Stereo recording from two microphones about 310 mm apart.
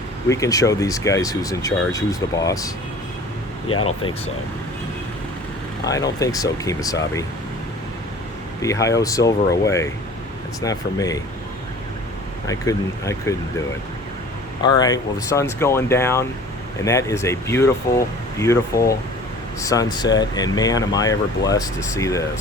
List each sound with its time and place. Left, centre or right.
0.3 s speech: centre
3.7 s speech: left
5.8 s speech: centre
8.6 s speech: centre
12.5 s speech: centre
14.6 s speech: centre